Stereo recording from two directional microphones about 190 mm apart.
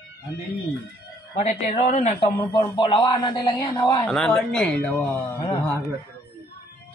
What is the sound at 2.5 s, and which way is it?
A man's voice, 25° left (ahead or behind).